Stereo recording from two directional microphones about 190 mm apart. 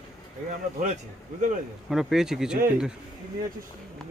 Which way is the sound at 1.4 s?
40° right (ahead or behind).